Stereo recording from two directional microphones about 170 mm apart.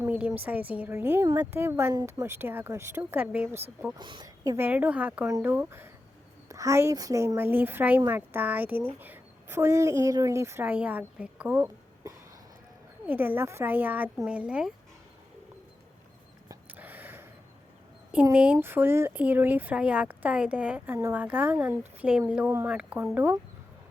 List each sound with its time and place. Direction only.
0.0 s speech: 10° right (ahead or behind)
3.9 s speech: 25° right (ahead or behind)
4.5 s a woman's voice: 10° right (ahead or behind)
16.5 s a sound: 10° right (ahead or behind)
18.1 s speech: 10° right (ahead or behind)